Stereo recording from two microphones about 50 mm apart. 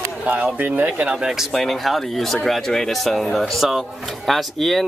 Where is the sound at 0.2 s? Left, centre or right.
Right.